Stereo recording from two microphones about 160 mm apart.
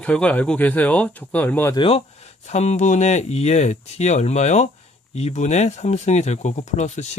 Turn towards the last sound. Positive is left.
turn(degrees=45)  # may be behind; listen again after turning